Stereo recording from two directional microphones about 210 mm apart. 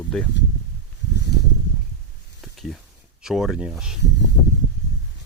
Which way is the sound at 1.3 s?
50° left (ahead or behind).